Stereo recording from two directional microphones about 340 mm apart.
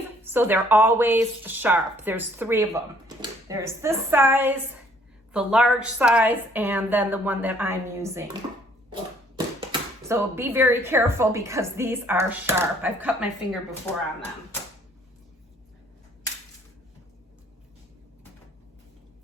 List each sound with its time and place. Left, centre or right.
0.2 s a woman's voice: centre
10.1 s a woman's voice: centre